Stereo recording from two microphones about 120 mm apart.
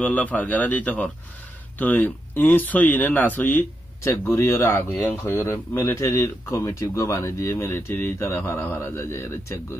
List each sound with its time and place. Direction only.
0.0 s speech: 15° left (ahead or behind)